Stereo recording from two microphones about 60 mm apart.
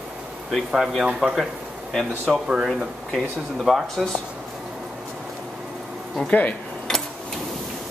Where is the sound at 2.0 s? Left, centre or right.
Centre.